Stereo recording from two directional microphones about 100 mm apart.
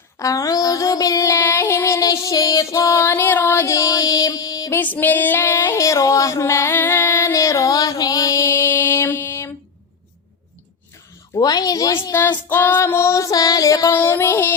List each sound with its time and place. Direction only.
0.2 s child singing: 35° left (ahead or behind)
4.7 s female singing: 20° left (ahead or behind)
11.3 s a sound: 40° left (ahead or behind)
12.5 s child singing: 20° left (ahead or behind)